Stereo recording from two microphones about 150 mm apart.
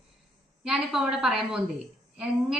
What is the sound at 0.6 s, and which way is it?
Speech, 5° right (ahead or behind).